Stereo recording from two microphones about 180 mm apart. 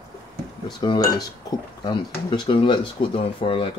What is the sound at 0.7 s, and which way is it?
Speech, 25° left (ahead or behind).